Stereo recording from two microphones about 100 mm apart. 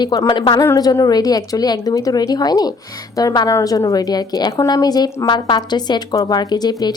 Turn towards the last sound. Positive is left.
turn(degrees=45)  # may be behind; listen again after turning